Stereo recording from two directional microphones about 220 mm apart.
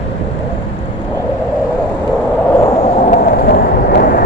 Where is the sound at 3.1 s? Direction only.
45° left (ahead or behind).